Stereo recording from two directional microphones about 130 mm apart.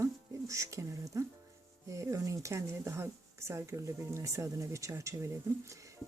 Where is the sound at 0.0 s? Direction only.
25° right (ahead or behind).